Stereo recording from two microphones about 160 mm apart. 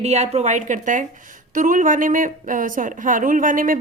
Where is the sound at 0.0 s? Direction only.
45° right (ahead or behind).